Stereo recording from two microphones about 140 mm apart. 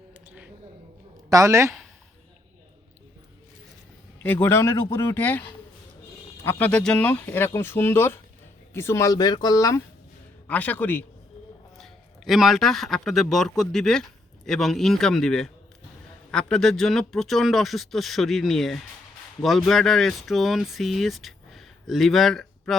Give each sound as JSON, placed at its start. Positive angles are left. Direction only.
{"t": 0.1, "sound": "a sound", "side_deg": -10}
{"t": 1.3, "sound": "speech", "side_deg": -20}
{"t": 4.2, "sound": "speech", "side_deg": 15}
{"t": 6.4, "sound": "speech", "side_deg": 15}
{"t": 10.4, "sound": "speech", "side_deg": 10}
{"t": 11.8, "sound": "a man's voice", "side_deg": 0}